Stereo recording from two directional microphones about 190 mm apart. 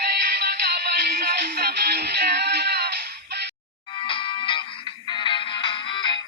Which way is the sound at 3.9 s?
25° left (ahead or behind).